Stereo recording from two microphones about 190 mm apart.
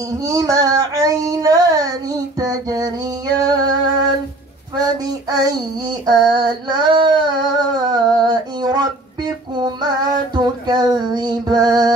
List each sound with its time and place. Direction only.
0.2 s child singing: 20° right (ahead or behind)
3.3 s music: 20° right (ahead or behind)
4.7 s child singing: 20° right (ahead or behind)